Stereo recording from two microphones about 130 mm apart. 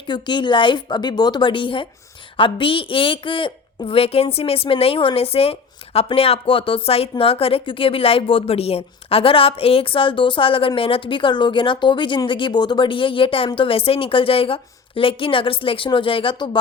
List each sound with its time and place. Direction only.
0.1 s a woman's voice: 35° left (ahead or behind)